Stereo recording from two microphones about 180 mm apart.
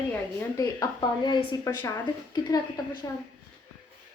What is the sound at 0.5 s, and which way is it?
Speech, 20° left (ahead or behind).